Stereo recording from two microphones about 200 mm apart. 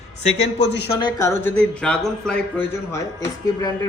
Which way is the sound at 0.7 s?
55° left (ahead or behind).